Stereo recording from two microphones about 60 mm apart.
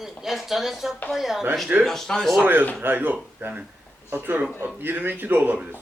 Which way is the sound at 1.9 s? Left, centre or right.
Centre.